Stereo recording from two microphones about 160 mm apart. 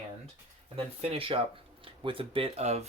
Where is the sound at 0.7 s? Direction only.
35° right (ahead or behind).